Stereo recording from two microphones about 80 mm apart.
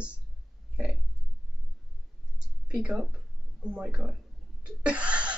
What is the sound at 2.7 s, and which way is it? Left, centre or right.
Speech, centre.